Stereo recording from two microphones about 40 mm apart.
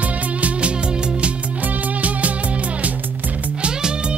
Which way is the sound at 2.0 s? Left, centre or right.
Right.